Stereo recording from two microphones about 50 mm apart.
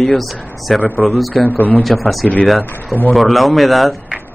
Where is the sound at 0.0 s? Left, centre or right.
Centre.